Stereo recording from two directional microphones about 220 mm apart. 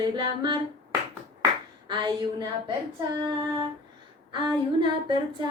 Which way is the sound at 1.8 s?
20° right (ahead or behind).